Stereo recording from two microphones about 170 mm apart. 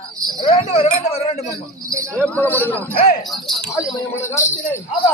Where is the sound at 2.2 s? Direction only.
10° left (ahead or behind).